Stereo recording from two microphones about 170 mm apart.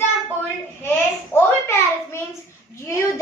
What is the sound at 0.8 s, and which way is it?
Child singing, 15° left (ahead or behind).